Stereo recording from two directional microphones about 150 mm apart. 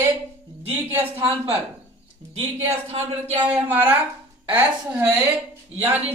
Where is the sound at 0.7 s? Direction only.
10° right (ahead or behind).